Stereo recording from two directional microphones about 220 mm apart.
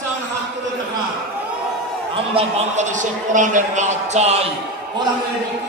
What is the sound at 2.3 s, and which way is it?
A man's voice, 30° right (ahead or behind).